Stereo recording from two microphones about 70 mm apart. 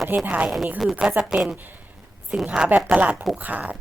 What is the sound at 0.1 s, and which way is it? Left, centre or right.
Speech, right.